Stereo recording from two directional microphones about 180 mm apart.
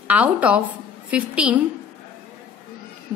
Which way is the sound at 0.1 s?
5° right (ahead or behind).